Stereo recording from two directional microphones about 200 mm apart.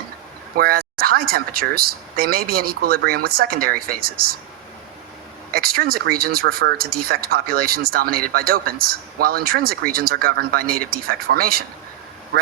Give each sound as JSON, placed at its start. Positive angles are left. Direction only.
{"t": 0.5, "sound": "speech", "side_deg": -50}
{"t": 5.5, "sound": "speech", "side_deg": -50}